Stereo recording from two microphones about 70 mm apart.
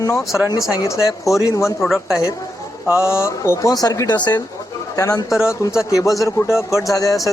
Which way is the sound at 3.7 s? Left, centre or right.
Left.